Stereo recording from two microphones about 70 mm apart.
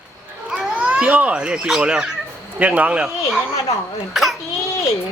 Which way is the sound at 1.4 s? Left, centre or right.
Centre.